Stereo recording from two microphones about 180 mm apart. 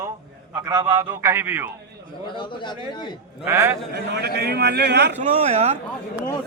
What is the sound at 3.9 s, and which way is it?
A man's voice, 65° right (ahead or behind).